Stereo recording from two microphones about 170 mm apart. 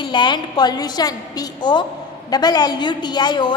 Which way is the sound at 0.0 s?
25° left (ahead or behind).